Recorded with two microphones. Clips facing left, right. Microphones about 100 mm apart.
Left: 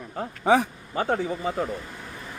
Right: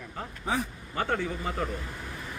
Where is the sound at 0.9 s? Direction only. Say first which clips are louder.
Left 4 dB; 35° left (ahead or behind).